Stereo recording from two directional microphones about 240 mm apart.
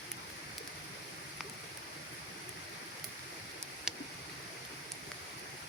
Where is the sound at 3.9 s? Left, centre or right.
Centre.